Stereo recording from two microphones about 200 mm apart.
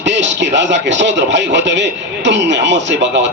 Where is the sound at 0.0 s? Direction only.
60° right (ahead or behind).